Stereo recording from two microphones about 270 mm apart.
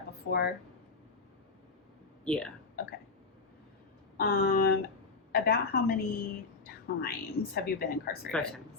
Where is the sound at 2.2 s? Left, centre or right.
Centre.